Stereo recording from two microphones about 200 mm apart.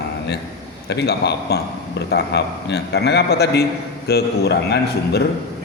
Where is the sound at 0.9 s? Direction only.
55° left (ahead or behind).